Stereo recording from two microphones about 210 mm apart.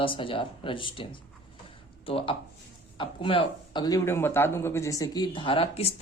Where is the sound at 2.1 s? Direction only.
25° left (ahead or behind).